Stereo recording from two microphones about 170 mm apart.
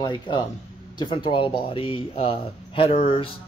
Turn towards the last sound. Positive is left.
turn(degrees=35)  # may be behind; listen again after turning